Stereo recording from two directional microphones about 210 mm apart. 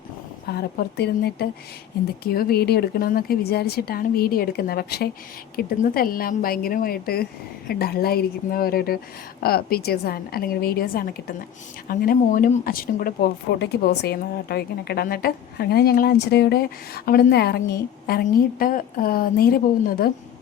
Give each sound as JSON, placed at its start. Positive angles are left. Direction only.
{"t": 0.4, "sound": "speech", "side_deg": 50}